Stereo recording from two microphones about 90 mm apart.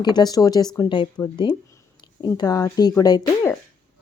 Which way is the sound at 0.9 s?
60° left (ahead or behind).